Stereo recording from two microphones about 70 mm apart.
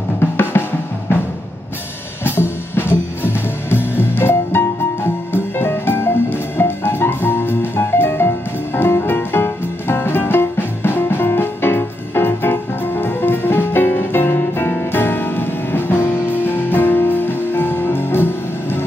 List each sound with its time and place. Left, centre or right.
0.2 s drum: left
2.2 s music: left